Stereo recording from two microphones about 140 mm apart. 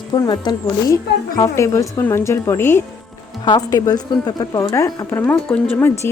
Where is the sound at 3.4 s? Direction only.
30° left (ahead or behind).